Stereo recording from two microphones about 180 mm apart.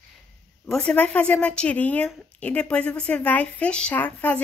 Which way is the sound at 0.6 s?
5° left (ahead or behind).